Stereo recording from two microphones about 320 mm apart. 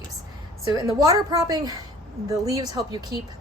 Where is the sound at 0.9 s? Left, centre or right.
Centre.